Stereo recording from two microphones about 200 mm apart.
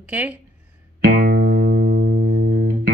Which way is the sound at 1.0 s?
45° right (ahead or behind).